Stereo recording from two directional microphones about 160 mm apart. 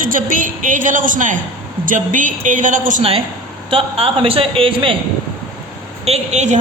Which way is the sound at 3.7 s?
35° right (ahead or behind).